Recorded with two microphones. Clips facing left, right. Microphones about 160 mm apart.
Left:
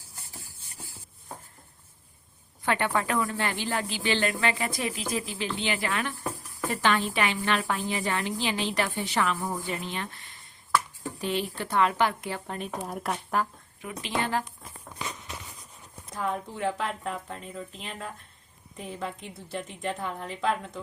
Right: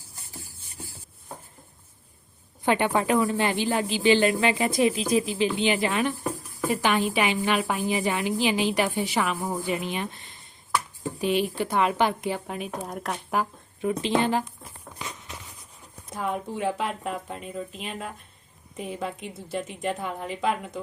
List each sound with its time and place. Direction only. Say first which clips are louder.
2.6 s a woman's voice: right 4 dB; 20° right (ahead or behind); by 13.1 s centre (ahead or behind)
13.8 s speech: right 8 dB; 25° right (ahead or behind)
16.1 s a woman's voice: right 2 dB; 15° right (ahead or behind)